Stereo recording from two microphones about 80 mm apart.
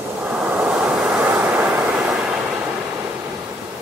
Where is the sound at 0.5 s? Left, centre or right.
Centre.